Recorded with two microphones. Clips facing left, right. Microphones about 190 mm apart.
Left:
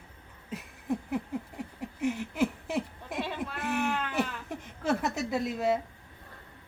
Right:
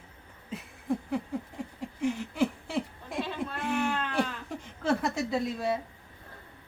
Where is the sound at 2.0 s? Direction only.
10° left (ahead or behind).